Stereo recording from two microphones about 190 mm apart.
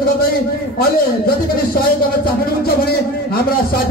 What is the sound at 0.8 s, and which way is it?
A man's voice, 50° left (ahead or behind).